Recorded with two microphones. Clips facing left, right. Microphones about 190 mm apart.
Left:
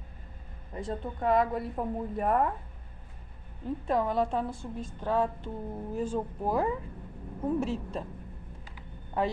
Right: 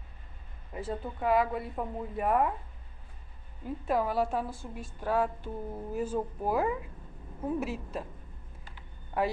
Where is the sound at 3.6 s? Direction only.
5° right (ahead or behind).